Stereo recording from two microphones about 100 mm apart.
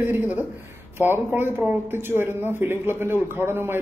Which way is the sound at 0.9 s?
20° right (ahead or behind).